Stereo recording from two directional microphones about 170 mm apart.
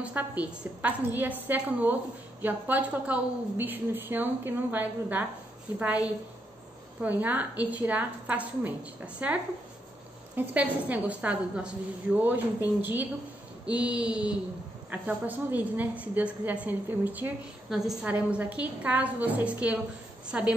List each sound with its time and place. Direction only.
0.0 s a woman's voice: 10° right (ahead or behind)
7.0 s a woman's voice: 10° right (ahead or behind)